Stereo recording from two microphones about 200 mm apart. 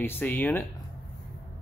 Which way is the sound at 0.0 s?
10° left (ahead or behind).